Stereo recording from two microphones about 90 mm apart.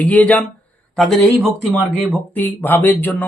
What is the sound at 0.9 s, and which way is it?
Speech, 5° left (ahead or behind).